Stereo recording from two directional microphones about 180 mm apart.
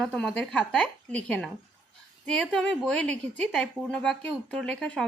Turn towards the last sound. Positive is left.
turn(degrees=5)  # may be behind; listen again after turning